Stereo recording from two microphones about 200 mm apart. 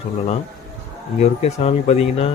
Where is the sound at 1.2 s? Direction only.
30° left (ahead or behind).